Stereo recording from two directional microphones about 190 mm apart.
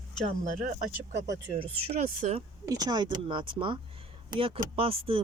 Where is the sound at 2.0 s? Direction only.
45° right (ahead or behind).